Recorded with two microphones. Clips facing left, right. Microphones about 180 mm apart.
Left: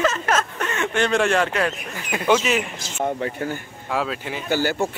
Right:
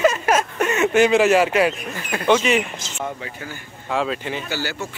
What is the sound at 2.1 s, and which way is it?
Speech, 5° left (ahead or behind).